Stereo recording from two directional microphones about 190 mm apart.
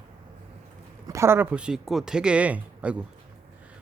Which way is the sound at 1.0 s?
15° right (ahead or behind).